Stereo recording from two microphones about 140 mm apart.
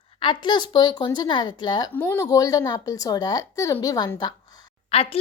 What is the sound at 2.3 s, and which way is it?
A woman's voice, 25° left (ahead or behind).